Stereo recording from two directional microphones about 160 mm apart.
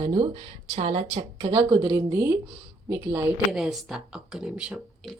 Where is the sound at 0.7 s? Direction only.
40° right (ahead or behind); by 3.2 s 15° right (ahead or behind).